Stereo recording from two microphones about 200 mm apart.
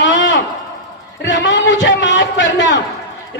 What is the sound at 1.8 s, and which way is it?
Speech, 65° left (ahead or behind).